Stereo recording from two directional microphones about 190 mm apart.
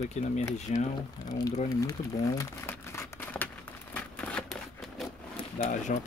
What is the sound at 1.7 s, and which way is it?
Crumpling, 20° left (ahead or behind).